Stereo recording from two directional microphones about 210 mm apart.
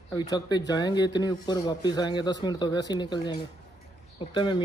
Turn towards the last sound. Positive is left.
turn(degrees=20)  # may be behind; listen again after turning